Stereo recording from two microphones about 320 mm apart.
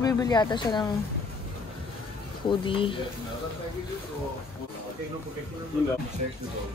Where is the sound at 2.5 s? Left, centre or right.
Centre.